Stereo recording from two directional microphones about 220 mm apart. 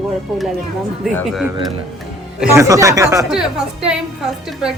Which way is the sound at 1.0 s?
Centre (ahead or behind).